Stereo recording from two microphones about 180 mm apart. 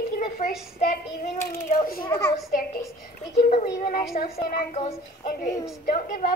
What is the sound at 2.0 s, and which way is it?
Speech, 15° left (ahead or behind).